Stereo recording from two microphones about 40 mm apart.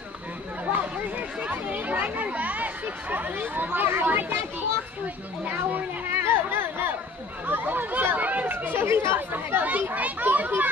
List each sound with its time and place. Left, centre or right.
0.7 s children playing: right
3.8 s speech: right
6.0 s chatter: right
7.4 s speech: right
8.7 s speech: right
9.6 s speech: right
10.2 s speech: right